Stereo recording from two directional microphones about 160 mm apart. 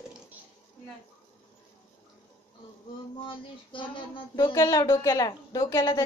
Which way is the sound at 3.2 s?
30° left (ahead or behind).